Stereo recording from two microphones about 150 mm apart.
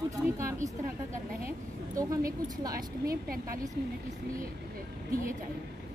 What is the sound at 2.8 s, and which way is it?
Speech, 75° right (ahead or behind).